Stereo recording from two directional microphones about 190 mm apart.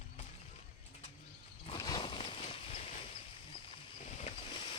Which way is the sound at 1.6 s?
25° left (ahead or behind).